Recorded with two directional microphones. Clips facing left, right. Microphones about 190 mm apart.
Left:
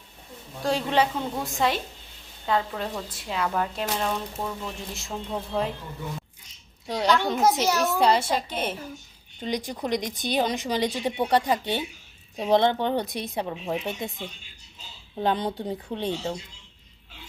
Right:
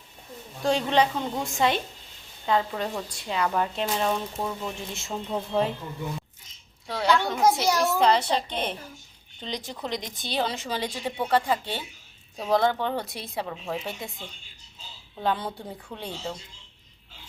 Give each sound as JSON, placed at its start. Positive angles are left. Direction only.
{"t": 0.6, "sound": "a woman's voice", "side_deg": 5}
{"t": 6.8, "sound": "a child's voice", "side_deg": 15}
{"t": 15.2, "sound": "speech", "side_deg": 20}